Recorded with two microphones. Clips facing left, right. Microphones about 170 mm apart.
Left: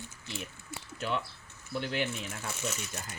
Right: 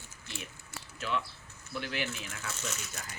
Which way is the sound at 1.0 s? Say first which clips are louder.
Left 1 dB; 35° left (ahead or behind).